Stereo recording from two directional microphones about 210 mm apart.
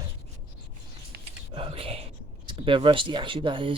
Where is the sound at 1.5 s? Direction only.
25° right (ahead or behind).